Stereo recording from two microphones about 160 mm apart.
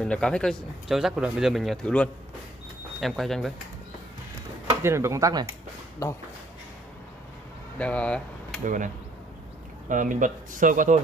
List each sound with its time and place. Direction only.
0.0 s speech: 5° left (ahead or behind)
4.8 s speech: 15° right (ahead or behind)
6.0 s speech: 20° left (ahead or behind)
7.8 s speech: 5° left (ahead or behind)
8.6 s speech: 55° right (ahead or behind)